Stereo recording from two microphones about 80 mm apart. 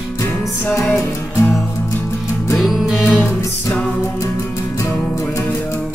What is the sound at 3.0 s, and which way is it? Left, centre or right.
Music, centre.